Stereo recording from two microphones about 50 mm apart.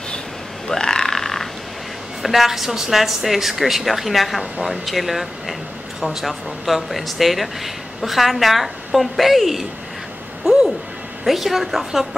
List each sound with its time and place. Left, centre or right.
0.7 s frog: centre
2.2 s a woman's voice: centre
10.4 s a sound: centre
11.2 s a woman's voice: centre